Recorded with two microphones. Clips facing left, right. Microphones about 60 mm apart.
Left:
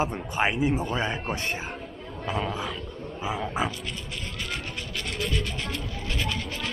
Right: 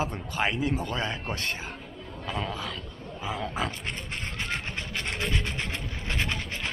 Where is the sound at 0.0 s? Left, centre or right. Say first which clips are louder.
Left 3 dB; centre.